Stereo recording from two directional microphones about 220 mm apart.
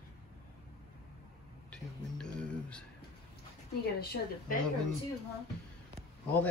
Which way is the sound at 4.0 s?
45° left (ahead or behind).